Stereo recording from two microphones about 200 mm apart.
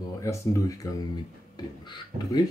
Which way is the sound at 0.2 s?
15° left (ahead or behind).